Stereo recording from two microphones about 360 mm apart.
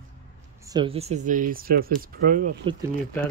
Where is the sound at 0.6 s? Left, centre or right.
Centre.